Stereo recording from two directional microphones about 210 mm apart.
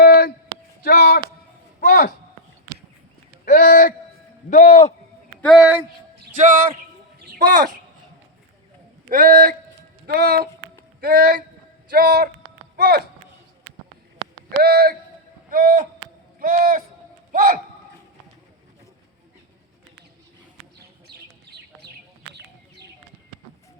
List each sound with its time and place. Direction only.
0.0 s a sound: 50° left (ahead or behind)
3.6 s a sound: 45° left (ahead or behind)
4.4 s a man's voice: 40° left (ahead or behind)
5.4 s speech: centre (ahead or behind)
6.3 s speech: 40° right (ahead or behind)
7.2 s a sound: 45° right (ahead or behind)
9.0 s speech: 40° right (ahead or behind)
14.6 s speech: 45° right (ahead or behind)
21.1 s bird: 50° right (ahead or behind)